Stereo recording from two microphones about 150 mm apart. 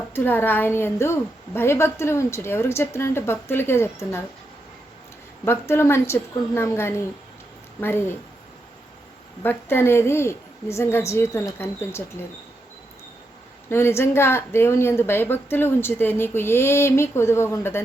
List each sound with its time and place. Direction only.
0.1 s speech: 15° left (ahead or behind)
5.5 s speech: 15° left (ahead or behind)
9.4 s speech: 15° left (ahead or behind)
13.7 s speech: 15° left (ahead or behind)